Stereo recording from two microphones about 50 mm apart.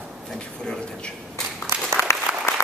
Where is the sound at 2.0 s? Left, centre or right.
Left.